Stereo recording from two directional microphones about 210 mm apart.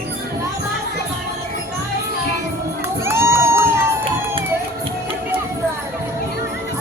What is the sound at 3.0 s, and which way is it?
Crowd, 10° right (ahead or behind).